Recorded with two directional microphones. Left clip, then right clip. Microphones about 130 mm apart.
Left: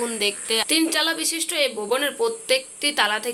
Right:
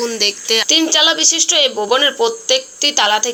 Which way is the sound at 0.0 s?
30° right (ahead or behind).